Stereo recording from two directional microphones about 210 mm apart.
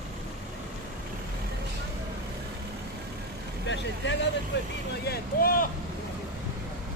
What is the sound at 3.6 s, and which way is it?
Vehicle, 60° left (ahead or behind).